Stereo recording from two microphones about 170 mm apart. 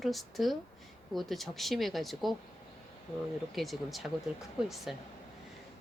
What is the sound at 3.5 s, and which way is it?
A woman's voice, centre (ahead or behind).